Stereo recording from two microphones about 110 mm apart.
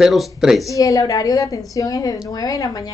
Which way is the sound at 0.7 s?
30° left (ahead or behind).